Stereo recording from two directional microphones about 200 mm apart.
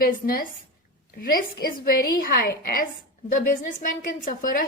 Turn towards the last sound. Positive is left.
turn(degrees=45)  # may be behind; listen again after turning